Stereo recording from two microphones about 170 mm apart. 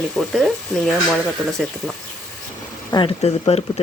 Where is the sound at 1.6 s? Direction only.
Centre (ahead or behind).